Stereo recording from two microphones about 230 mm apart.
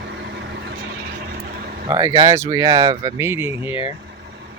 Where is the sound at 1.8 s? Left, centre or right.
Centre.